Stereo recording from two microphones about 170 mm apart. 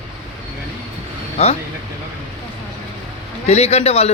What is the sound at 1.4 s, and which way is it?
Speech, 35° left (ahead or behind).